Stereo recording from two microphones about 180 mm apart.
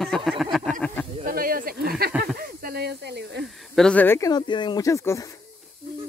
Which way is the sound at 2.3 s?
55° right (ahead or behind).